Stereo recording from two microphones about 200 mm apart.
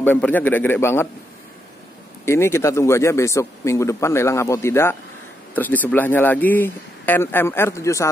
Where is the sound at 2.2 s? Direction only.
15° left (ahead or behind).